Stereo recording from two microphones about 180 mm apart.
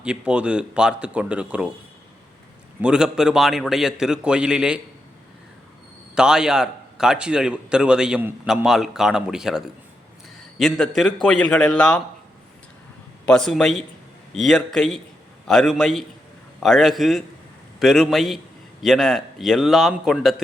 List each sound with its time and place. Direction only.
0.0 s a man's voice: 5° right (ahead or behind)
2.8 s a man's voice: 5° right (ahead or behind)
6.1 s a man's voice: 5° right (ahead or behind)
13.2 s a man's voice: 5° left (ahead or behind)